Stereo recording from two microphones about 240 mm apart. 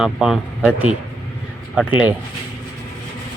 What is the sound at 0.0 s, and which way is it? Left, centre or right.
Speech, centre.